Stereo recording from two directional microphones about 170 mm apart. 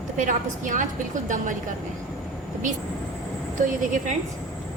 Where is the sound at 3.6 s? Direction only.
50° right (ahead or behind).